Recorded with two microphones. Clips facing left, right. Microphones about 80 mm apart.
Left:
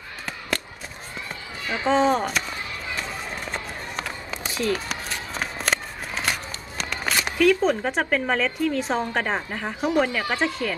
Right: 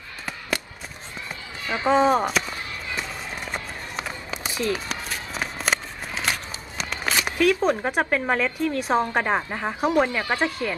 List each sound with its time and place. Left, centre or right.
1.9 s speech: centre
3.5 s run: centre
6.3 s a sound: centre
7.3 s speech: centre